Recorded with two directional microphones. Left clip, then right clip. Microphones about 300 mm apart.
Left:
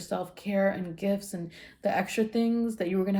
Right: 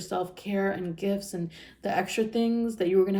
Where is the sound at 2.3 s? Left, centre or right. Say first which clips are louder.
Right 1 dB; centre.